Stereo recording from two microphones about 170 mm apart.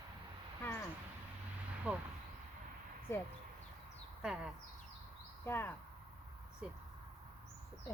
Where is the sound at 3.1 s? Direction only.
15° left (ahead or behind).